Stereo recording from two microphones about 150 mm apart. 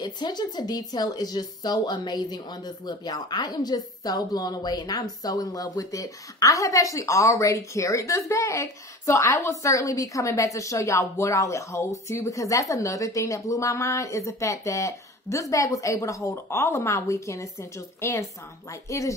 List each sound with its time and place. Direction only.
0.0 s speech: 30° left (ahead or behind)